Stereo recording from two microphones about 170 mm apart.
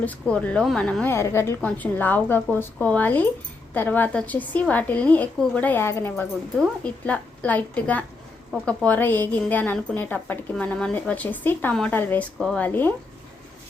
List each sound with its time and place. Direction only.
0.0 s a woman's voice: 10° left (ahead or behind)